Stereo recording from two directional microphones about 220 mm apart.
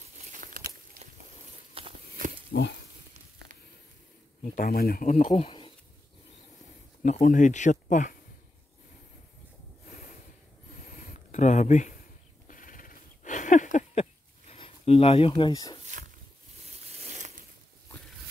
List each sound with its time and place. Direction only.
0.3 s a sound: 35° right (ahead or behind)
1.8 s walk: 25° right (ahead or behind)
2.5 s pig: 50° left (ahead or behind)
4.6 s speech: 40° left (ahead or behind); by 5.7 s 25° left (ahead or behind)
7.0 s speech: 35° left (ahead or behind)
9.8 s snort: 35° left (ahead or behind)
10.7 s a sound: 35° left (ahead or behind)
14.5 s speech: 25° left (ahead or behind)
16.6 s a sound: 30° right (ahead or behind)